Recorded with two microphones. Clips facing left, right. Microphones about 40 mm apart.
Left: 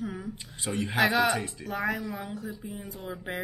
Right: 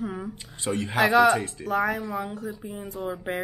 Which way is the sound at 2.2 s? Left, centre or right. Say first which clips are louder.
Right 5 dB; right.